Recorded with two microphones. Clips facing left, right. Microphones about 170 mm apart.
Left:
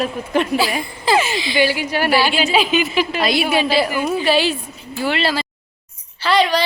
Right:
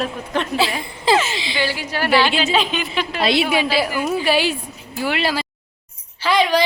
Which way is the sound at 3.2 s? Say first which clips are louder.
Right 3 dB; 25° right (ahead or behind).